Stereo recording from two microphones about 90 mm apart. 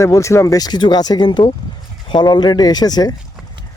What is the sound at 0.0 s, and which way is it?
Speech, 35° left (ahead or behind).